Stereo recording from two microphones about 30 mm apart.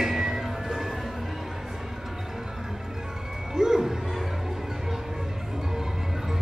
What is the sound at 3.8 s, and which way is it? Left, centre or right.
Music, centre.